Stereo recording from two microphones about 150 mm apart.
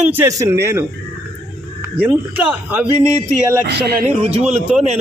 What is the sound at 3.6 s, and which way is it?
Speech, 90° right.